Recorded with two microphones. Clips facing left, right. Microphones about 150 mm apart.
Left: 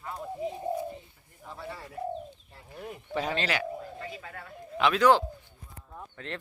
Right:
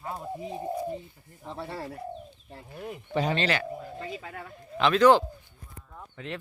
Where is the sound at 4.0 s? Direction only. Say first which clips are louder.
Right 3 dB; 20° right (ahead or behind).